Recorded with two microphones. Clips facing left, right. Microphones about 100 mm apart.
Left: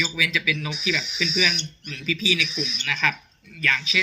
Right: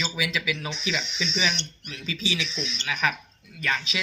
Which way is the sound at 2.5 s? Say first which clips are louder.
Left 3 dB; 15° left (ahead or behind).